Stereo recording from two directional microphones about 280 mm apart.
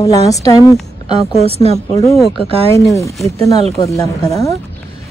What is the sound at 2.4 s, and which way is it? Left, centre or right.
Speech, centre.